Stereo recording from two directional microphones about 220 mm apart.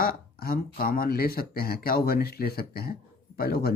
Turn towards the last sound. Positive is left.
turn(degrees=45)  # may be behind; listen again after turning